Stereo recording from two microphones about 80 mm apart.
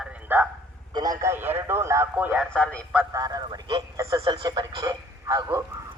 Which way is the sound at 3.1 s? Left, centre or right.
Right.